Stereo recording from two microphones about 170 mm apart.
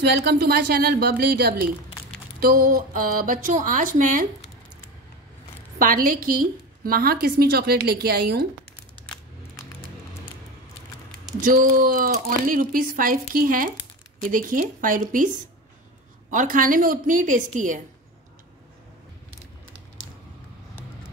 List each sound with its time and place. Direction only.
0.0 s a woman's voice: 80° right
2.4 s a woman's voice: 60° right (ahead or behind)
5.8 s a woman's voice: 55° right (ahead or behind)
11.1 s a woman's voice: 55° right (ahead or behind)